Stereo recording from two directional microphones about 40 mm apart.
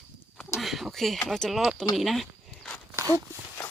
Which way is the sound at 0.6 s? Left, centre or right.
Centre.